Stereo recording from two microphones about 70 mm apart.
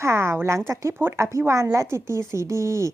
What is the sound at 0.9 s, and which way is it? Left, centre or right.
A woman's voice, right.